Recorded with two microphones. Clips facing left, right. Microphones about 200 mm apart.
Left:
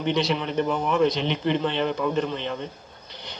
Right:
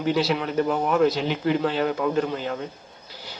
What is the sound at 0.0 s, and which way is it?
Speech, 5° right (ahead or behind).